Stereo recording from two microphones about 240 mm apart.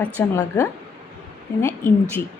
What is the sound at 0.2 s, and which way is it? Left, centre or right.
A woman's voice, centre.